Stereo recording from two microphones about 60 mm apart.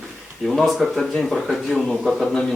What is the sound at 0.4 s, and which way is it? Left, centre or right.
Speech, centre.